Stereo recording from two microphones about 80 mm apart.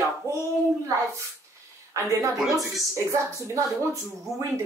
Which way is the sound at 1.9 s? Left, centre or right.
Right.